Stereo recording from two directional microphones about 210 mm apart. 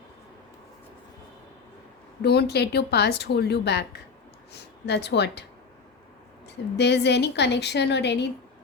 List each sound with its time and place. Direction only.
2.2 s a woman's voice: 50° left (ahead or behind)
6.7 s a woman's voice: 55° left (ahead or behind)